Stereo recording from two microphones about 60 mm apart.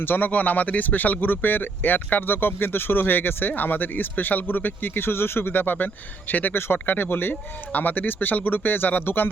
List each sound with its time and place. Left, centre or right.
0.0 s speech: left